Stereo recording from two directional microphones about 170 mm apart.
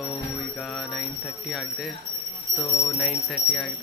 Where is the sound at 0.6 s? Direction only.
Centre (ahead or behind).